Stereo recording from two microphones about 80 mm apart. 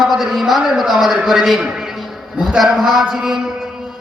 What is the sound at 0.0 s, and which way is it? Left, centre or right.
Speech, centre.